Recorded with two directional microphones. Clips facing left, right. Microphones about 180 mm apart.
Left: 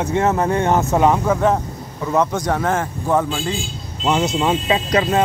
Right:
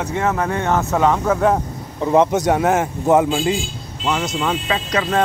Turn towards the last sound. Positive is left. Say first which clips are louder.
# left 3 dB
turn(degrees=25)  # may be behind; listen again after turning